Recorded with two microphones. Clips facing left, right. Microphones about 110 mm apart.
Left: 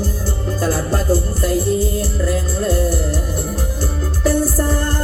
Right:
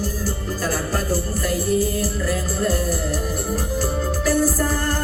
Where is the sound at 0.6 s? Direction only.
25° left (ahead or behind).